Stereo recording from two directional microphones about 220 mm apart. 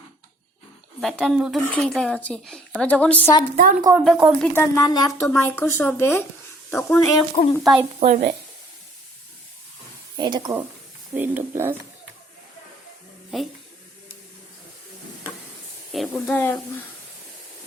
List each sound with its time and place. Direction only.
1.0 s speech: centre (ahead or behind)
3.6 s a woman's voice: 40° right (ahead or behind)
4.0 s speech: centre (ahead or behind)
4.5 s speech: 10° left (ahead or behind)
7.6 s speech: centre (ahead or behind)
7.9 s a woman's voice: 30° right (ahead or behind)
10.2 s speech: 20° right (ahead or behind)
11.1 s speech: 10° right (ahead or behind)
13.3 s speech: centre (ahead or behind)
15.9 s speech: centre (ahead or behind)